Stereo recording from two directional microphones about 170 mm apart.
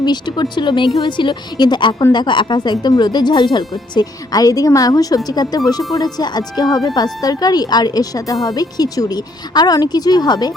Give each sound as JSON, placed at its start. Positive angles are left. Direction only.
{"t": 0.0, "sound": "speech", "side_deg": 25}